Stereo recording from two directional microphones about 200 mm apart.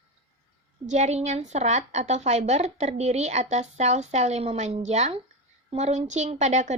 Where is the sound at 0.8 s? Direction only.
35° right (ahead or behind).